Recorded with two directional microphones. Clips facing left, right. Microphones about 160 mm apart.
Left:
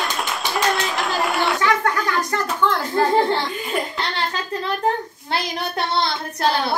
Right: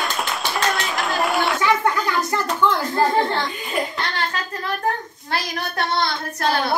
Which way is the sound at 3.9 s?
25° left (ahead or behind).